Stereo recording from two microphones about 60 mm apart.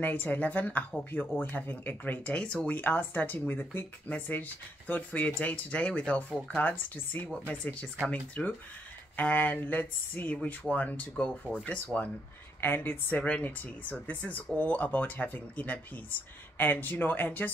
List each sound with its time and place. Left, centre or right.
0.0 s speech: left
2.2 s speech: centre
12.5 s speech: left